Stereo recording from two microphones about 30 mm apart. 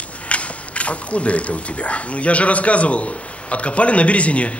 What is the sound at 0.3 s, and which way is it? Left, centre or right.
A man's voice, left.